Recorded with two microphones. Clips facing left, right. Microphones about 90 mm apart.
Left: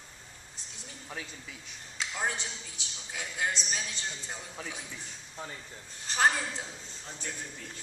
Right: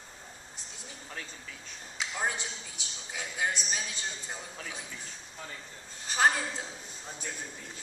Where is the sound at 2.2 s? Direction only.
15° right (ahead or behind).